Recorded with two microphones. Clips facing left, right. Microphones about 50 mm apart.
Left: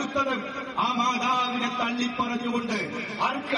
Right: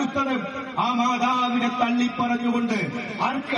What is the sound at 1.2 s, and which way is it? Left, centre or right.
Speech, right.